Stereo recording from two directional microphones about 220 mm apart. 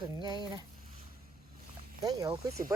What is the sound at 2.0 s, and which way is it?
Speech, 15° right (ahead or behind).